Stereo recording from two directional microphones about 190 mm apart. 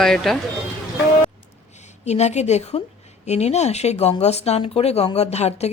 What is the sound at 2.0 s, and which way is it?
Speech, 35° left (ahead or behind).